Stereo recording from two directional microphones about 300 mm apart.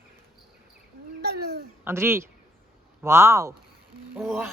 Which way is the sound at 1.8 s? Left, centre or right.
Centre.